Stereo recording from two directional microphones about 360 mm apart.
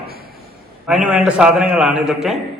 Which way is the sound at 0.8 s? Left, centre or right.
Centre.